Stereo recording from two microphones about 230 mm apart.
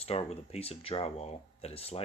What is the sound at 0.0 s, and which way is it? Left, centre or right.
Speech, left.